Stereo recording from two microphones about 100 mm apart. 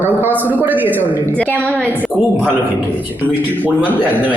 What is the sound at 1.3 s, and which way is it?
Speech, 15° left (ahead or behind).